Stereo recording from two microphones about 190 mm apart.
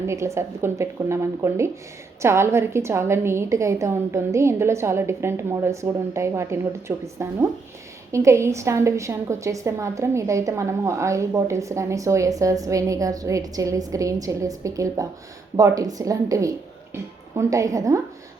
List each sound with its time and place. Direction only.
0.1 s a woman's voice: 15° right (ahead or behind)